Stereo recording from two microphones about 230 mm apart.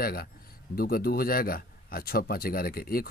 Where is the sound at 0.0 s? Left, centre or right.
Left.